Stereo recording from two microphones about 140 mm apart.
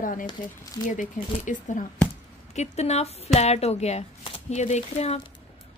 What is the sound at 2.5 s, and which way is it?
Speech, 50° left (ahead or behind).